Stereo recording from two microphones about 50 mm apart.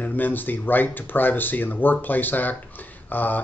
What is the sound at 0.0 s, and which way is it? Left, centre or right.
Speech, left.